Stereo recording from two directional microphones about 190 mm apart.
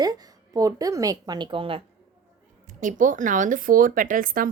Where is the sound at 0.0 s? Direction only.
20° right (ahead or behind).